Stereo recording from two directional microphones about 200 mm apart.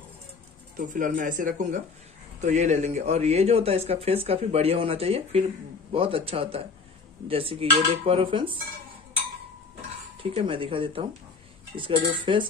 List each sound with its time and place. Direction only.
0.7 s a man's voice: 40° right (ahead or behind)
5.9 s dishes: 25° right (ahead or behind)
10.2 s dishes: 25° right (ahead or behind)